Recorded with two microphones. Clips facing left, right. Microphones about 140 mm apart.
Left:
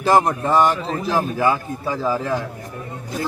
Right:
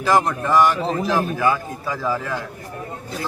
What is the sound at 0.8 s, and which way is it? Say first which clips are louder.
Speech: right 3 dB; 30° right (ahead or behind).